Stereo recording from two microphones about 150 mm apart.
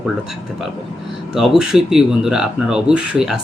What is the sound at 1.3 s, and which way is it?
Speech, 5° right (ahead or behind).